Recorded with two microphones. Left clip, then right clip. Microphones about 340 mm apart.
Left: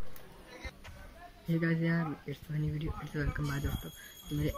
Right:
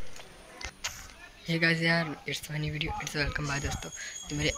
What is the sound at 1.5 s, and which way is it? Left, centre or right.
Speech, right.